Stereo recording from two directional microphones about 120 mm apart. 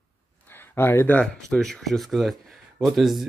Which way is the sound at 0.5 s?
20° left (ahead or behind).